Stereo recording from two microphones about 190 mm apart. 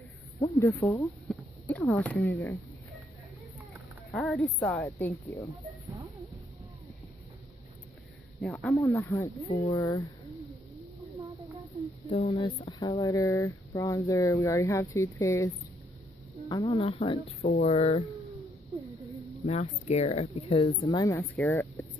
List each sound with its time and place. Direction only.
0.4 s speech: 15° left (ahead or behind)
1.3 s speech: 5° left (ahead or behind)
4.1 s speech: 5° left (ahead or behind)
4.8 s speech: 10° left (ahead or behind)
8.4 s speech: centre (ahead or behind)
8.7 s speech: 15° left (ahead or behind)
12.1 s speech: 35° left (ahead or behind)
19.4 s speech: 35° left (ahead or behind)
20.8 s speech: 20° left (ahead or behind)